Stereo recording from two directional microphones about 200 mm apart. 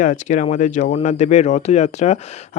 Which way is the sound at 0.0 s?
40° left (ahead or behind).